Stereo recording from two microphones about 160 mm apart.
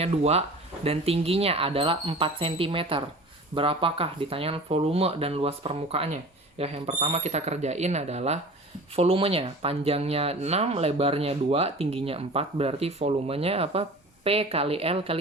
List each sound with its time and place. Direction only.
0.0 s speech: 40° right (ahead or behind)